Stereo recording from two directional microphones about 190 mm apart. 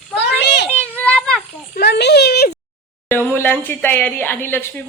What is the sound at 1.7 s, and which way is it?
Speech, 60° left (ahead or behind).